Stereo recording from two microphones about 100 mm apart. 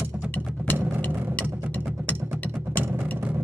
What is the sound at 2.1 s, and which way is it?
Music, 20° right (ahead or behind).